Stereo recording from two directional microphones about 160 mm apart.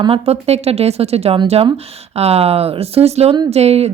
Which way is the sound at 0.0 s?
40° right (ahead or behind).